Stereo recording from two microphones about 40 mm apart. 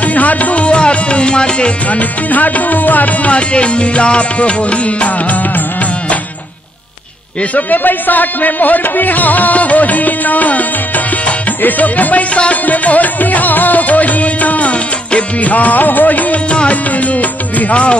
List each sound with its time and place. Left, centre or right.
0.0 s tabla: left
1.9 s music: left
3.3 s music: left
7.5 s music: left
11.6 s music: left
16.4 s music: left